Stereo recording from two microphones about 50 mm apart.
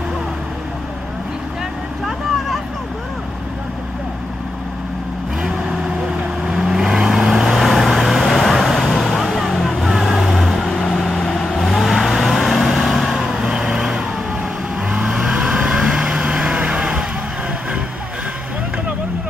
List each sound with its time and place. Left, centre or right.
5.4 s vehicle: centre
15.0 s vehicle: centre